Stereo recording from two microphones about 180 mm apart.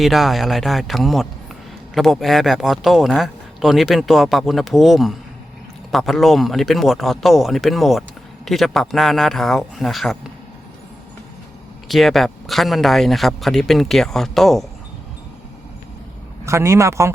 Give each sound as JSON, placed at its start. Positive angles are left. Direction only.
{"t": 0.0, "sound": "a man's voice", "side_deg": 0}
{"t": 11.9, "sound": "a man's voice", "side_deg": 0}
{"t": 16.5, "sound": "speech", "side_deg": -15}